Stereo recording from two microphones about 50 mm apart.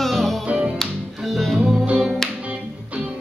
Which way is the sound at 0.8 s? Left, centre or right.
Centre.